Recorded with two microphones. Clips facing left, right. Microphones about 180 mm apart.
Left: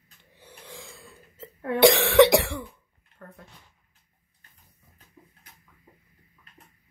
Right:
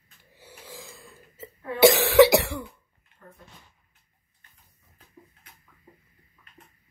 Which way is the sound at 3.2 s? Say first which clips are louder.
Left 4 dB; 65° left (ahead or behind).